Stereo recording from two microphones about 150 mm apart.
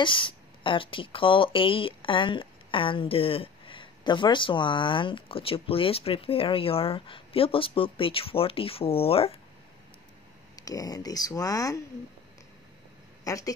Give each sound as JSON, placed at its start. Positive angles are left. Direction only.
{"t": 0.0, "sound": "speech", "side_deg": 35}
{"t": 10.5, "sound": "speech", "side_deg": 25}
{"t": 13.2, "sound": "speech", "side_deg": 20}